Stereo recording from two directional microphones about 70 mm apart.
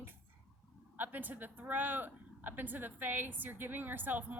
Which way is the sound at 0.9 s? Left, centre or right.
Right.